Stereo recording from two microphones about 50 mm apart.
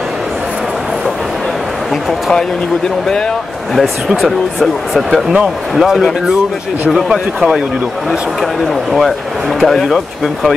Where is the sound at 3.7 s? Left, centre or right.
Centre.